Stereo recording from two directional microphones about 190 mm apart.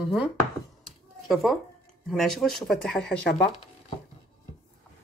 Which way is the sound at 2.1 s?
Centre (ahead or behind).